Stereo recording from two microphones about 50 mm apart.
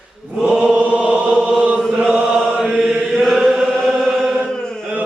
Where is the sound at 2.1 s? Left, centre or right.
Centre.